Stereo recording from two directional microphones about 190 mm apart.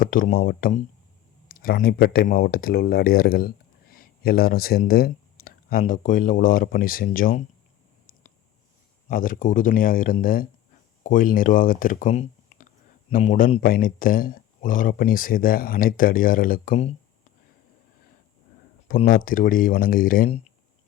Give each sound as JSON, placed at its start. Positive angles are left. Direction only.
{"t": 0.0, "sound": "speech", "side_deg": 45}
{"t": 9.0, "sound": "speech", "side_deg": 45}
{"t": 18.9, "sound": "speech", "side_deg": 45}